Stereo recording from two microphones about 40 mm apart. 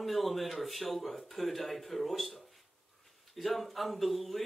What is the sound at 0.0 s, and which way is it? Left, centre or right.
Speech, centre.